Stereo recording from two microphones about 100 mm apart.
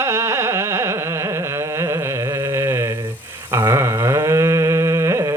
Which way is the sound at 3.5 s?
25° right (ahead or behind).